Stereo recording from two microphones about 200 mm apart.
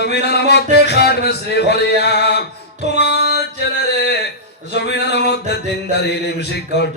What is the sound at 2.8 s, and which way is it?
Music, 55° left (ahead or behind).